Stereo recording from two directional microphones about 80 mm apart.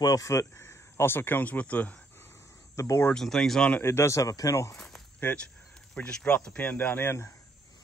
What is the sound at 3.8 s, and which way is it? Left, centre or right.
Speech, left.